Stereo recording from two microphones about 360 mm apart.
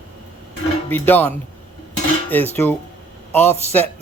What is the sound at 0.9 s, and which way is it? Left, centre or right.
Speech, centre.